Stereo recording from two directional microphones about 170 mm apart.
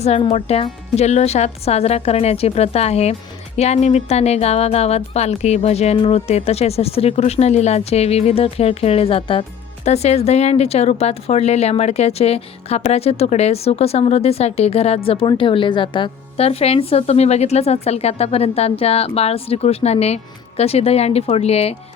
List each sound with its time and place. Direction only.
0.0 s speech: 40° left (ahead or behind)